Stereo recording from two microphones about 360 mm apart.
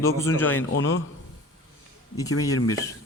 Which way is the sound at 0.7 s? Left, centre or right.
Left.